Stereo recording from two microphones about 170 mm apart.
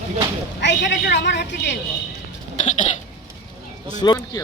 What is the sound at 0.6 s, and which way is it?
A man's voice, 90° left.